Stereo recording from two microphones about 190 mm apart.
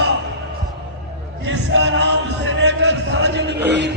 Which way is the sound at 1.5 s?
75° right (ahead or behind).